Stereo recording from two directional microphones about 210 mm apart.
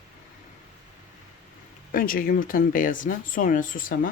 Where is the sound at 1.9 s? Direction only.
40° left (ahead or behind).